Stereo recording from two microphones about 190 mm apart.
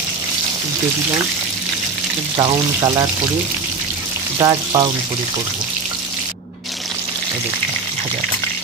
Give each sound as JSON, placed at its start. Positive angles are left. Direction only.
{"t": 2.3, "sound": "frying", "side_deg": -20}
{"t": 4.4, "sound": "frying", "side_deg": -20}